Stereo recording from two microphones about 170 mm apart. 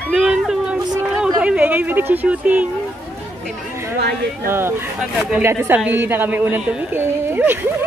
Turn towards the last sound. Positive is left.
turn(degrees=-10)  # may be behind; listen again after turning